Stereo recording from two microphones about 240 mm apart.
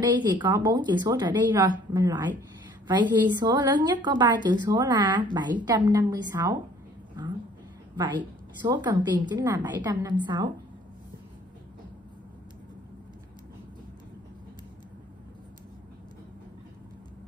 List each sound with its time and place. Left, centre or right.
0.0 s a woman's voice: centre